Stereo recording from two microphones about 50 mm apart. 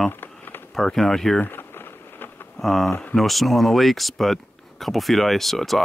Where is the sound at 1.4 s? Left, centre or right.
Left.